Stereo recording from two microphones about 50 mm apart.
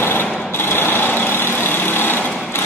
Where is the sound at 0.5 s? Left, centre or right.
Left.